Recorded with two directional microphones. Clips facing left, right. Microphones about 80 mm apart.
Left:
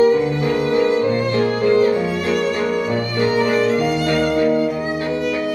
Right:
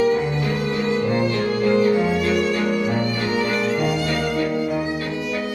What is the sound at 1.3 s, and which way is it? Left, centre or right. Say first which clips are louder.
Violin: left 3 dB; left.